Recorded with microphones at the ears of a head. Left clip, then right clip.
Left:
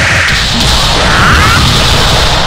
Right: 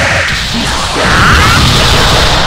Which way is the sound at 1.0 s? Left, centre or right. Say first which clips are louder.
Right 2 dB; centre.